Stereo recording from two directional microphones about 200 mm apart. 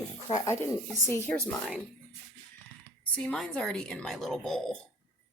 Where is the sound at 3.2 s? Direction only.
5° left (ahead or behind).